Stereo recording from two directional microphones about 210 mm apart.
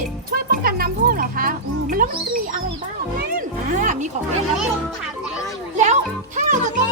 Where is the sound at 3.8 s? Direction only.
35° right (ahead or behind).